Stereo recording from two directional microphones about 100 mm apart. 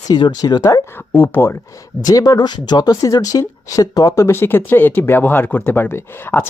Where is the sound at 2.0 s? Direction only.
40° left (ahead or behind).